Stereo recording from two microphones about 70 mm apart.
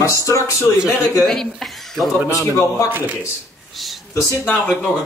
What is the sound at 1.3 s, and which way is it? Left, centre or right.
Speech, centre.